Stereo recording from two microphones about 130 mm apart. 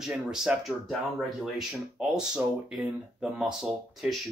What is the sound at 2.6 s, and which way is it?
Speech, 5° right (ahead or behind).